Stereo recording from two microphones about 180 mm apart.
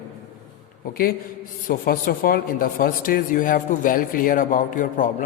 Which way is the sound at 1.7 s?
55° left (ahead or behind).